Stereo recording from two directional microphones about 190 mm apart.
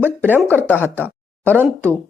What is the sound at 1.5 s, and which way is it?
Speech, 10° right (ahead or behind).